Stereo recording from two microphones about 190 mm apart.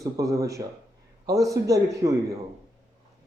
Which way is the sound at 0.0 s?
15° right (ahead or behind).